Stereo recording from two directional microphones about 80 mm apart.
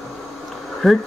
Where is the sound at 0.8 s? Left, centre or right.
Centre.